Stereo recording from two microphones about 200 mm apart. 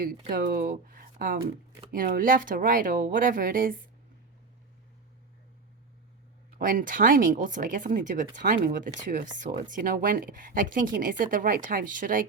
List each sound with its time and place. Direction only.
0.3 s speech: 45° right (ahead or behind)
6.6 s speech: 45° right (ahead or behind)